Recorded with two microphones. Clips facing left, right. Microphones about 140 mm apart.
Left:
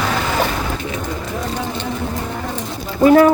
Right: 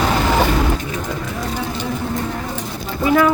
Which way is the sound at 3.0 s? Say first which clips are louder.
Left 6 dB; 45° left (ahead or behind).